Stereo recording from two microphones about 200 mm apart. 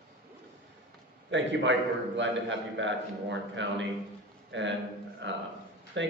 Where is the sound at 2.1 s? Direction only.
65° right (ahead or behind).